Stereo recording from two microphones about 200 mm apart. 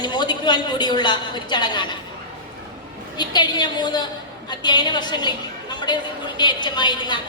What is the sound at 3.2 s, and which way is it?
A woman's voice, 20° left (ahead or behind).